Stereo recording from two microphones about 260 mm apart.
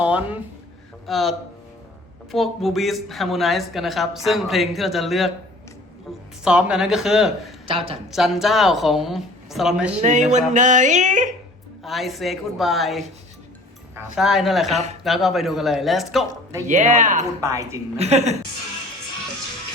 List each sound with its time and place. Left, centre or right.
0.0 s a sound: centre
1.0 s speech: centre
6.4 s speech: centre
7.7 s speech: right
8.1 s speech: centre
10.0 s speech: right
11.8 s speech: centre
14.2 s speech: centre
14.7 s speech: right
15.0 s speech: centre
16.6 s speech: right
17.4 s a woman's voice: centre
17.9 s speech: right